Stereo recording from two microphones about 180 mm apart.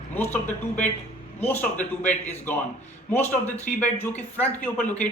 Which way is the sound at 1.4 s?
10° left (ahead or behind).